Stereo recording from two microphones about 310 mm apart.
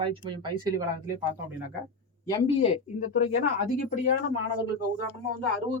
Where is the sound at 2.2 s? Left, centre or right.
Centre.